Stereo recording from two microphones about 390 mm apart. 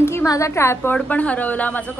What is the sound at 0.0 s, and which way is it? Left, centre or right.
A woman's voice, centre.